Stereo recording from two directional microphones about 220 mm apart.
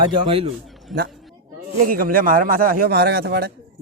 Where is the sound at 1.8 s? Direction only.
40° right (ahead or behind).